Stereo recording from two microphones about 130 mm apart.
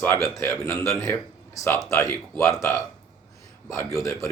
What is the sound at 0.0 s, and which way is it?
A man's voice, 20° left (ahead or behind).